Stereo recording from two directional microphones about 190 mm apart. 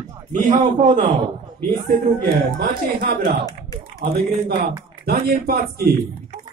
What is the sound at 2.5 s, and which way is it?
Speech, 55° right (ahead or behind).